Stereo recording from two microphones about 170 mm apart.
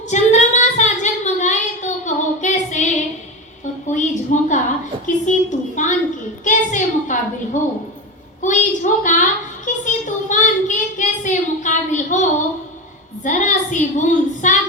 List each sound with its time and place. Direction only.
0.1 s child singing: 45° left (ahead or behind)
3.9 s a sound: 45° left (ahead or behind)
7.6 s speech: 45° left (ahead or behind)
8.4 s a sound: 45° left (ahead or behind)
9.6 s child singing: 45° left (ahead or behind)
13.2 s child singing: 45° left (ahead or behind)